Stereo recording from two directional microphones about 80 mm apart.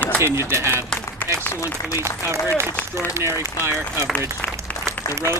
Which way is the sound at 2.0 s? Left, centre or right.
Right.